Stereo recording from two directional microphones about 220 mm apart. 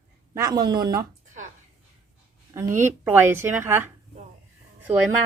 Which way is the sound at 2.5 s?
10° right (ahead or behind).